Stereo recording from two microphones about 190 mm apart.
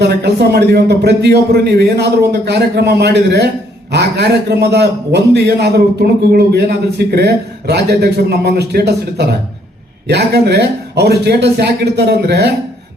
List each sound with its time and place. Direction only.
0.0 s a man's voice: 60° right (ahead or behind)